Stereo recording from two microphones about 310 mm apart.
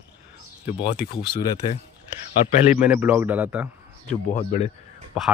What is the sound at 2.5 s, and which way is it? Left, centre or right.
Speech, left.